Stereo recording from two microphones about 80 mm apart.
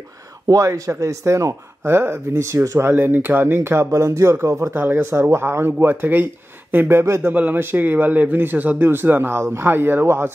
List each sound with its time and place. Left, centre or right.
0.5 s speech: right
2.9 s speech: right
4.8 s a man's voice: right